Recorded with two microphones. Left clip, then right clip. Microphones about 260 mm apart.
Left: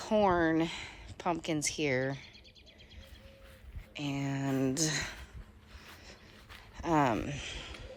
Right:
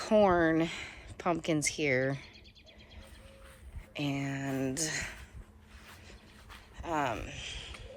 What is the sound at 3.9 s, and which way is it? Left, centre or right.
Speech, centre.